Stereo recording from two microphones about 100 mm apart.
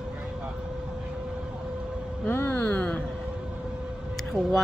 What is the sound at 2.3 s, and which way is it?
Speech, 20° left (ahead or behind).